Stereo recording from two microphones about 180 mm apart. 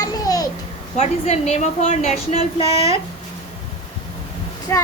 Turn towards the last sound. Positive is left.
turn(degrees=15)  # may be behind; listen again after turning